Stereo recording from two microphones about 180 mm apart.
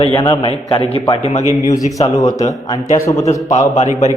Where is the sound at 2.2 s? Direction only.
20° left (ahead or behind).